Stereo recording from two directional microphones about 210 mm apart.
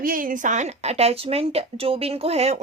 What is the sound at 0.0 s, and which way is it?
A woman's voice, 40° right (ahead or behind).